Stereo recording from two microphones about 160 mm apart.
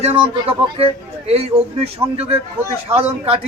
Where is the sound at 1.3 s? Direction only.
40° right (ahead or behind).